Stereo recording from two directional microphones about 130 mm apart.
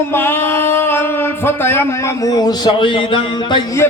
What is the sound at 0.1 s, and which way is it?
Speech, 15° left (ahead or behind).